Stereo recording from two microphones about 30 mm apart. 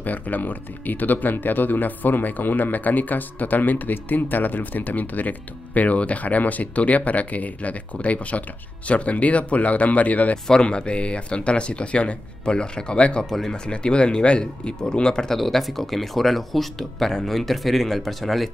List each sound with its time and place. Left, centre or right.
0.0 s speech: left
5.8 s speech: left
10.6 s speech: left
15.3 s speech: centre